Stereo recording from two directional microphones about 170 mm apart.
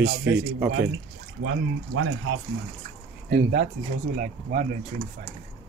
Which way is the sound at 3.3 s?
60° right (ahead or behind).